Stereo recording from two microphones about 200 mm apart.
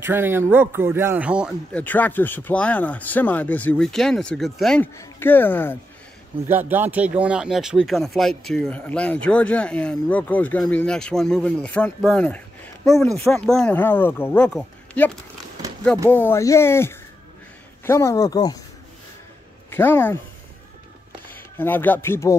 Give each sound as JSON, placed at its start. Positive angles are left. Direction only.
{"t": 0.0, "sound": "speech", "side_deg": -10}
{"t": 1.7, "sound": "speech", "side_deg": 10}
{"t": 6.5, "sound": "speech", "side_deg": -10}
{"t": 19.7, "sound": "speech", "side_deg": 10}
{"t": 21.3, "sound": "speech", "side_deg": 10}